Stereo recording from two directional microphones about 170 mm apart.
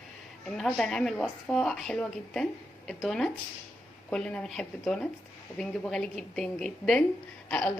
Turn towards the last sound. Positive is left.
turn(degrees=10)  # may be behind; listen again after turning